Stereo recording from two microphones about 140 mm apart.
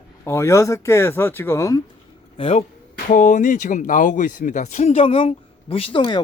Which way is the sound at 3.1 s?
65° left (ahead or behind).